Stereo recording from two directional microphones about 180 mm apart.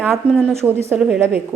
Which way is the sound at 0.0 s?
5° right (ahead or behind).